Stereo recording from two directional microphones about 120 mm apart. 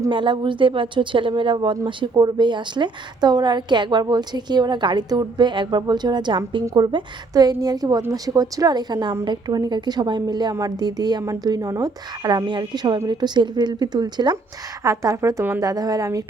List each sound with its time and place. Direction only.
0.1 s a woman's voice: 40° right (ahead or behind); by 15.6 s 20° right (ahead or behind)
15.6 s speech: 30° right (ahead or behind)